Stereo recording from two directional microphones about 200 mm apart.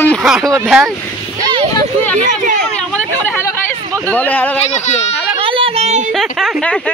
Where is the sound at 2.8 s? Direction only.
5° left (ahead or behind).